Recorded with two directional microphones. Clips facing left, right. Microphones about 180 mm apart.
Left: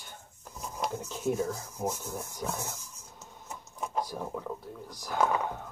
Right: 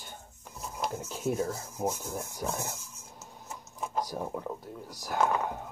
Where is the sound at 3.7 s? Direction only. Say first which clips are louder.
Even; centre (ahead or behind).